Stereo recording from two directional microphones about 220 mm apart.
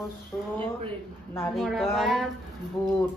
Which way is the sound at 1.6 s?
Centre (ahead or behind).